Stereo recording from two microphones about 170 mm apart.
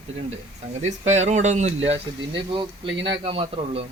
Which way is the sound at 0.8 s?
40° right (ahead or behind).